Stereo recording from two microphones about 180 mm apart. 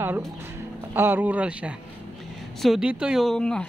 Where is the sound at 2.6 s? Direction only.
Centre (ahead or behind).